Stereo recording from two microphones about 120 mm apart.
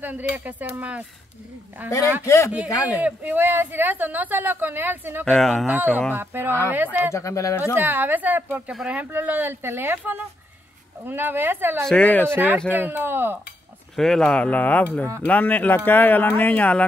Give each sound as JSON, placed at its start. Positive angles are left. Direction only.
{"t": 0.0, "sound": "speech", "side_deg": -15}
{"t": 2.2, "sound": "speech", "side_deg": 25}
{"t": 3.0, "sound": "speech", "side_deg": -15}
{"t": 5.2, "sound": "speech", "side_deg": 5}
{"t": 5.7, "sound": "speech", "side_deg": -15}
{"t": 7.1, "sound": "speech", "side_deg": 25}
{"t": 7.7, "sound": "speech", "side_deg": -15}
{"t": 11.8, "sound": "speech", "side_deg": 10}
{"t": 12.3, "sound": "speech", "side_deg": -20}
{"t": 13.9, "sound": "speech", "side_deg": 5}